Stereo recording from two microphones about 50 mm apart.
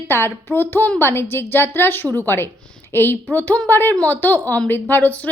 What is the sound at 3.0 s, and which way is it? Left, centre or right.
A woman's voice, left.